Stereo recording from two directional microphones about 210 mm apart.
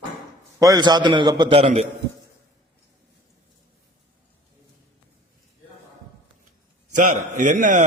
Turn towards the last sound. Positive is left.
turn(degrees=-40)  # may be behind; listen again after turning